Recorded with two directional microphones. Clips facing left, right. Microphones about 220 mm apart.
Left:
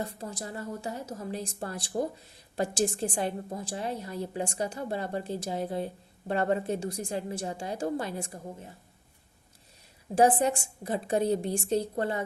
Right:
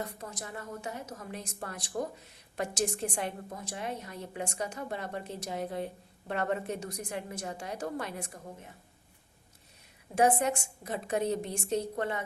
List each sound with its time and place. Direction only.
0.0 s a woman's voice: 30° left (ahead or behind)
10.2 s a woman's voice: 35° left (ahead or behind)